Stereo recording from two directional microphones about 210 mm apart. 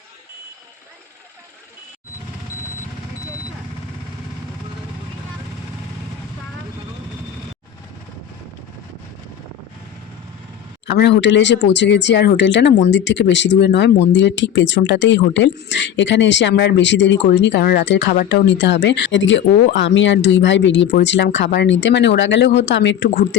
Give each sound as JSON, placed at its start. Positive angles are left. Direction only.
{"t": 10.8, "sound": "speech", "side_deg": 55}
{"t": 18.1, "sound": "speech", "side_deg": 45}